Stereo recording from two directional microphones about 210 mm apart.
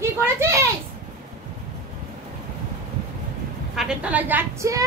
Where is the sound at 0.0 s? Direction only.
10° right (ahead or behind).